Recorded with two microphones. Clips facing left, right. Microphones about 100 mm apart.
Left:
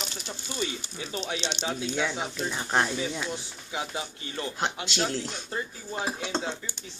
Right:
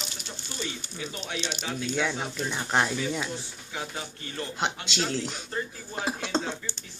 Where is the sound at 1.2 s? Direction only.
20° left (ahead or behind).